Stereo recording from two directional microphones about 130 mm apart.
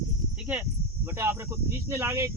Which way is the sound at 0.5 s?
10° right (ahead or behind).